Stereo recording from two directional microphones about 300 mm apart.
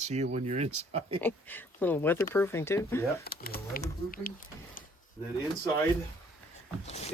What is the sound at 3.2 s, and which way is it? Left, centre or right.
Speech, left.